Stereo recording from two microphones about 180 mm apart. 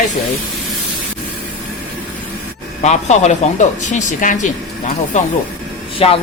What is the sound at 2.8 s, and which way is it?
Speech, 40° left (ahead or behind).